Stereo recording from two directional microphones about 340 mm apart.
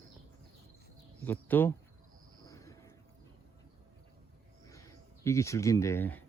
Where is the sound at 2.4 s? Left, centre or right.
Centre.